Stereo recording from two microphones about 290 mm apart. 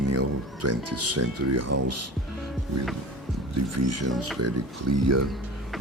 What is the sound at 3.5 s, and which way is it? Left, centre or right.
Speech, right.